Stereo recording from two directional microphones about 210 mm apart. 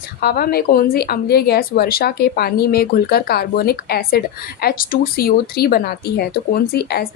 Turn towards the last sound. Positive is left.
turn(degrees=50)  # may be behind; listen again after turning